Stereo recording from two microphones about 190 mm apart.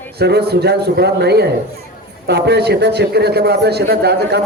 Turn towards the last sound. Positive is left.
turn(degrees=-60)  # may be behind; listen again after turning